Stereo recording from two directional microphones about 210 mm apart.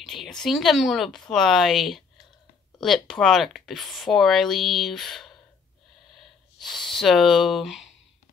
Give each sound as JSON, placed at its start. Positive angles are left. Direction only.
{"t": 0.0, "sound": "speech", "side_deg": 0}